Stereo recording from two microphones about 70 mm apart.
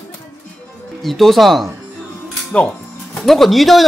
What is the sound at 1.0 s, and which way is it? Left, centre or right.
Speech, centre.